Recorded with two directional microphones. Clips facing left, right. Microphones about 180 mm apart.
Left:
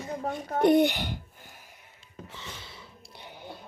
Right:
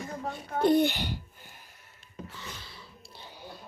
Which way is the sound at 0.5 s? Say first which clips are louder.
Left 2 dB; 20° left (ahead or behind).